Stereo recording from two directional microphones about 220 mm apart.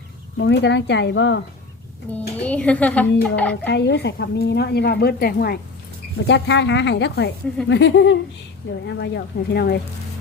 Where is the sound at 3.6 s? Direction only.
50° left (ahead or behind).